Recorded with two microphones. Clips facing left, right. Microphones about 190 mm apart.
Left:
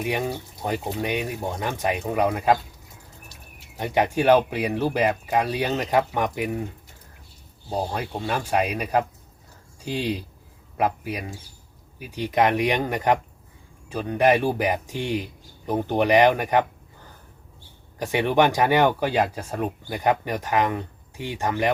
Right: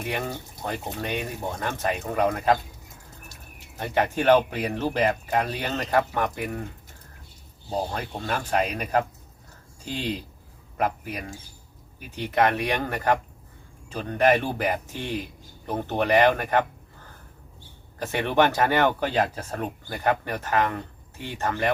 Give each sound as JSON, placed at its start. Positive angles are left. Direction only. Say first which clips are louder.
{"t": 0.0, "sound": "speech", "louder": "left 4 dB", "side_deg": 15}
{"t": 3.8, "sound": "speech", "louder": "left 3 dB", "side_deg": 15}
{"t": 7.9, "sound": "speech", "louder": "left 2 dB", "side_deg": 10}
{"t": 18.0, "sound": "speech", "louder": "left 2 dB", "side_deg": 15}